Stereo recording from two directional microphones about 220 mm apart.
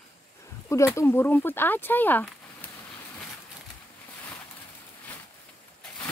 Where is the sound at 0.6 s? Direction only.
15° left (ahead or behind).